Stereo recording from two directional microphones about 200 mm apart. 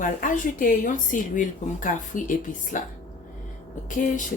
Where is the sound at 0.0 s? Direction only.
40° left (ahead or behind).